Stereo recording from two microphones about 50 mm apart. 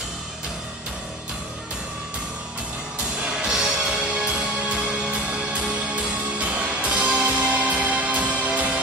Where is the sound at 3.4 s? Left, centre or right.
Centre.